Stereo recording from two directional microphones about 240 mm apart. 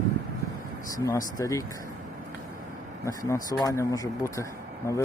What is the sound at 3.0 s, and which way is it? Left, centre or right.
Speech, centre.